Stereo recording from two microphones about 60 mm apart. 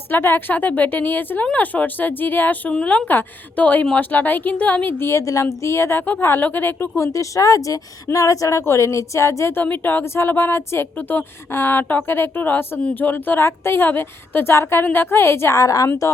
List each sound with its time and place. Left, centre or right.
0.1 s a woman's voice: left
2.7 s speech: left
5.0 s a woman's voice: left
7.1 s speech: left
9.6 s a woman's voice: left
10.9 s a woman's voice: left
15.5 s a woman's voice: left